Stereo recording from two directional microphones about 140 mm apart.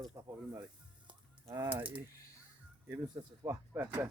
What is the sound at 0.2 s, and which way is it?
Speech, 15° right (ahead or behind).